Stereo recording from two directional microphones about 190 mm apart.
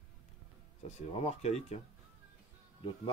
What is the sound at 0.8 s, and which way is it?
Speech, 35° left (ahead or behind).